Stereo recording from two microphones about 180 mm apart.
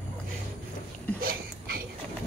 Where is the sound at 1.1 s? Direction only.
55° right (ahead or behind).